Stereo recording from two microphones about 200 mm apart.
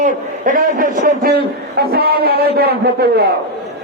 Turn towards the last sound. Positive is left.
turn(degrees=-50)  # may be behind; listen again after turning